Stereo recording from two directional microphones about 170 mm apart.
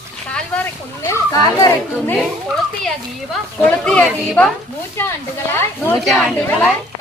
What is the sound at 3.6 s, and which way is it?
Speech, 10° left (ahead or behind).